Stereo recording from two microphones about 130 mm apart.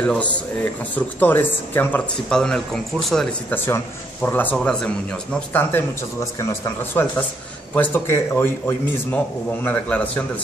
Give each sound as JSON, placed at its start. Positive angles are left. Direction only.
{"t": 0.0, "sound": "a man's voice", "side_deg": 10}
{"t": 3.4, "sound": "a man's voice", "side_deg": 15}
{"t": 6.9, "sound": "a man's voice", "side_deg": 15}